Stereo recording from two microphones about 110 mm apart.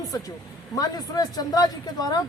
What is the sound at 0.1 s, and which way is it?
A woman's voice, 35° left (ahead or behind).